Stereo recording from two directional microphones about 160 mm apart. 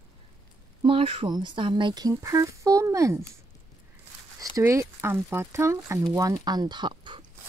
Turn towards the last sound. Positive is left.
turn(degrees=-30)  # may be behind; listen again after turning